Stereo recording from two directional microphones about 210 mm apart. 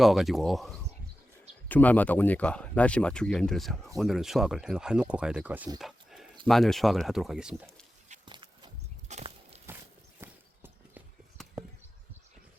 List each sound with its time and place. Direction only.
0.0 s speech: centre (ahead or behind)
5.8 s a sound: centre (ahead or behind)
6.4 s speech: centre (ahead or behind)
8.2 s walk: 20° right (ahead or behind)
10.2 s horse: 10° right (ahead or behind)
11.4 s a sound: centre (ahead or behind)